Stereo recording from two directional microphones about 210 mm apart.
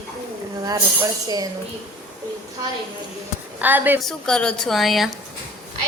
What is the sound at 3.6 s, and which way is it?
Speech, 10° right (ahead or behind).